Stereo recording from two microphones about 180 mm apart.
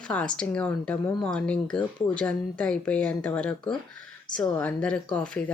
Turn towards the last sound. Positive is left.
turn(degrees=5)  # may be behind; listen again after turning